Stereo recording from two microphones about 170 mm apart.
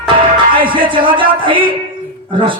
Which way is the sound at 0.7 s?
30° right (ahead or behind).